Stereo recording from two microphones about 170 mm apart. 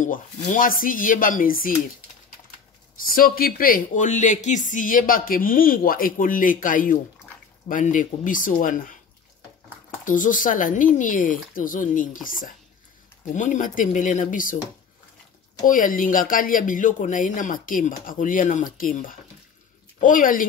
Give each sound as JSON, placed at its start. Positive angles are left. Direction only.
{"t": 0.0, "sound": "speech", "side_deg": 50}
{"t": 3.1, "sound": "speech", "side_deg": 60}
{"t": 10.0, "sound": "speech", "side_deg": 50}
{"t": 15.6, "sound": "speech", "side_deg": 50}